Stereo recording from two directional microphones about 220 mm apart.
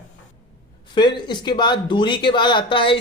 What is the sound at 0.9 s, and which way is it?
Speech, 20° left (ahead or behind).